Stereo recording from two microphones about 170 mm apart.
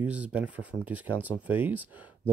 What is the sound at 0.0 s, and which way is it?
Speech, 10° right (ahead or behind).